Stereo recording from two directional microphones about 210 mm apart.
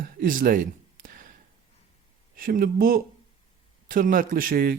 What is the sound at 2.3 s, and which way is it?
A man's voice, 45° right (ahead or behind).